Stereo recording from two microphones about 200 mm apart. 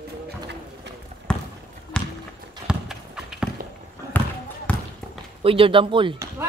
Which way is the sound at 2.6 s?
5° right (ahead or behind).